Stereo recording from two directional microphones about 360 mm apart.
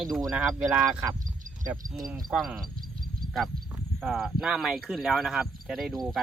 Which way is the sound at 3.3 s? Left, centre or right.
Centre.